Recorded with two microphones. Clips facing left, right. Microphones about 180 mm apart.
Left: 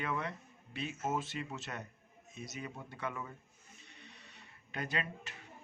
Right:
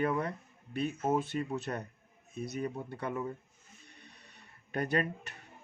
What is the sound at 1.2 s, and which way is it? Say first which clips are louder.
Speech: right 8 dB; 60° right (ahead or behind).